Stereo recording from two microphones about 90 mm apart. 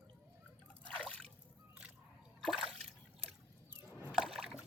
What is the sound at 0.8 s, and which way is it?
Liquid, 10° left (ahead or behind).